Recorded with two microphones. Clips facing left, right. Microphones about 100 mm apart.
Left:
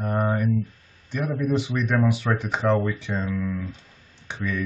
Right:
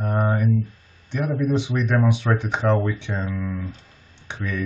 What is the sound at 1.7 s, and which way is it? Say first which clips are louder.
Speech: right 1 dB; 15° right (ahead or behind).